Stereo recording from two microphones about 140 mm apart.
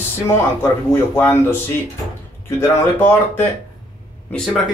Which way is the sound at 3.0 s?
15° left (ahead or behind).